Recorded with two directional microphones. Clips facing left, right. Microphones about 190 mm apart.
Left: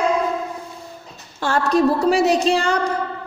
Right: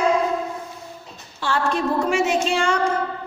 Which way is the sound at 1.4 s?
40° left (ahead or behind).